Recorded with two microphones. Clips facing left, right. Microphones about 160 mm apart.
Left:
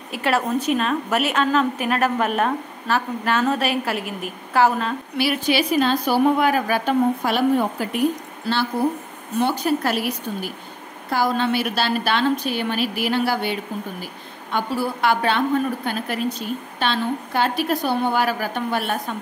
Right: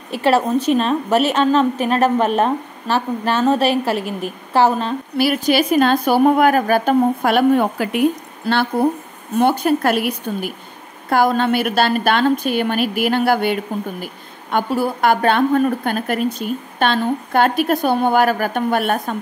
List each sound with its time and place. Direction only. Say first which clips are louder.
0.1 s a woman's voice: right 5 dB; 30° right (ahead or behind)
5.1 s a woman's voice: right 5 dB; 45° right (ahead or behind); by 8.0 s 70° right (ahead or behind)
8.8 s a woman's voice: right 4 dB; 55° right (ahead or behind)